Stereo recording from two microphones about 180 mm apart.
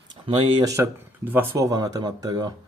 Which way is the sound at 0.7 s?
10° right (ahead or behind).